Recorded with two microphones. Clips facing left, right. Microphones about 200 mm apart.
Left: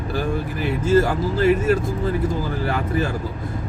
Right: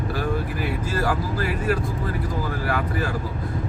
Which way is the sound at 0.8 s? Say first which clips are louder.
Left 10 dB; 25° left (ahead or behind).